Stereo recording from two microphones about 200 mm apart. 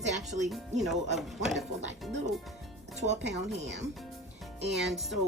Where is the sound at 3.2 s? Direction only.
60° right (ahead or behind).